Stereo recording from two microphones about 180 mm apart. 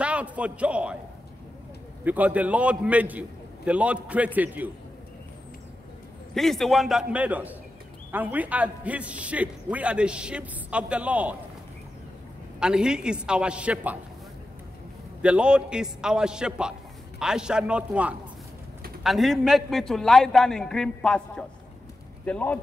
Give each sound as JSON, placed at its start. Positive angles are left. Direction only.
{"t": 0.0, "sound": "a sound", "side_deg": -5}
{"t": 2.0, "sound": "a man's voice", "side_deg": -10}
{"t": 6.3, "sound": "a man's voice", "side_deg": 0}
{"t": 12.5, "sound": "a man's voice", "side_deg": -5}
{"t": 15.2, "sound": "a man's voice", "side_deg": -5}